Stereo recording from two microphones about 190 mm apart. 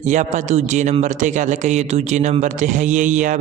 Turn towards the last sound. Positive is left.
turn(degrees=-40)  # may be behind; listen again after turning